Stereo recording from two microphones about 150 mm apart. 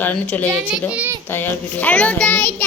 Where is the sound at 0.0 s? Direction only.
10° left (ahead or behind).